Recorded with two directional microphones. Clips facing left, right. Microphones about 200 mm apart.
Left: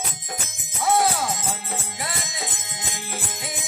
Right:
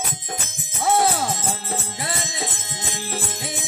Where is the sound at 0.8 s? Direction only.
25° right (ahead or behind).